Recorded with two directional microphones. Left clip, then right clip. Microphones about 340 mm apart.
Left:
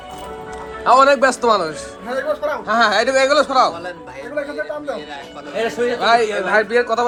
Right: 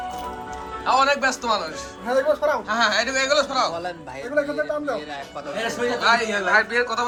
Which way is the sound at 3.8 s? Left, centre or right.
Right.